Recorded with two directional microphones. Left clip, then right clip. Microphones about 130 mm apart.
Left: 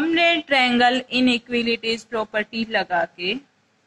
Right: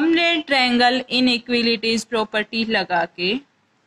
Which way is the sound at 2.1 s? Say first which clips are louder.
Right 3 dB; 35° right (ahead or behind).